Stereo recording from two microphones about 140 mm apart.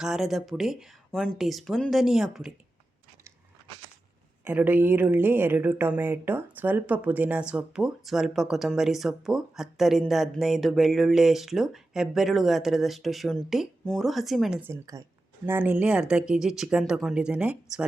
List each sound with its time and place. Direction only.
0.0 s speech: centre (ahead or behind)
4.4 s speech: 15° right (ahead or behind)
14.6 s a woman's voice: 20° right (ahead or behind)